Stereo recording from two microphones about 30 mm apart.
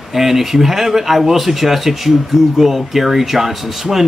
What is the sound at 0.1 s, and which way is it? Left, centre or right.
A man's voice, centre.